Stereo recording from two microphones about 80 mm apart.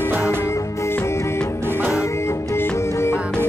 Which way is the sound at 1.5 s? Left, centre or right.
Right.